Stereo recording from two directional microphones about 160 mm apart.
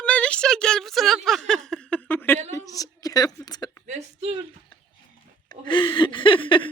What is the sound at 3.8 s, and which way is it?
Speech, 45° right (ahead or behind).